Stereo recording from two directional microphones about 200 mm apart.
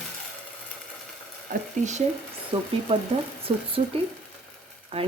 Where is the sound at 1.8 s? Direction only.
35° right (ahead or behind).